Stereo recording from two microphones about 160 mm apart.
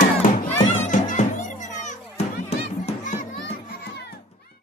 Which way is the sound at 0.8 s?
50° left (ahead or behind).